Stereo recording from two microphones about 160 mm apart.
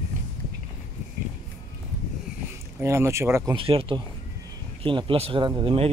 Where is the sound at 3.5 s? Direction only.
35° right (ahead or behind).